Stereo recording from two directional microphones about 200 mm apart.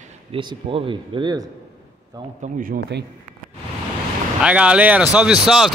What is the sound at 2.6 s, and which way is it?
Speech, 50° right (ahead or behind).